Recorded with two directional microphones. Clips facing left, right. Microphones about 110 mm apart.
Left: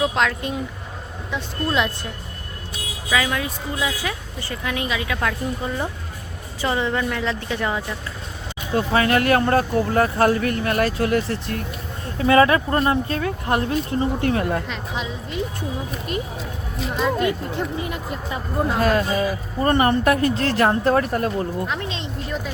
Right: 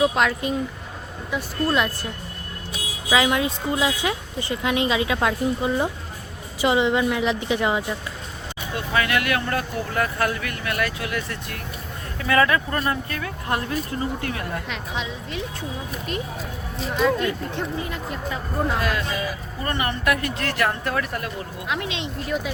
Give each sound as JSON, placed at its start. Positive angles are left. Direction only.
{"t": 0.0, "sound": "a woman's voice", "side_deg": -5}
{"t": 3.1, "sound": "a woman's voice", "side_deg": -20}
{"t": 8.7, "sound": "speech", "side_deg": 35}
{"t": 14.7, "sound": "a woman's voice", "side_deg": 0}
{"t": 17.0, "sound": "a woman's voice", "side_deg": 5}
{"t": 18.8, "sound": "speech", "side_deg": 40}
{"t": 22.0, "sound": "speech", "side_deg": -5}